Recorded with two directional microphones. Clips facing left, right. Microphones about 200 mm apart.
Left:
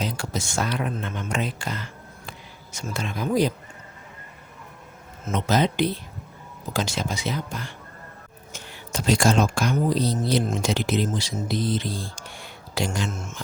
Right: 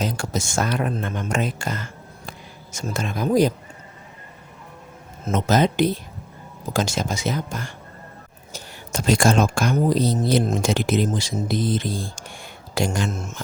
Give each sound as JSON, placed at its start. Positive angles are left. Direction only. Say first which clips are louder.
{"t": 0.0, "sound": "speech", "louder": "right 3 dB", "side_deg": -45}
{"t": 5.2, "sound": "speech", "louder": "right 3 dB", "side_deg": -45}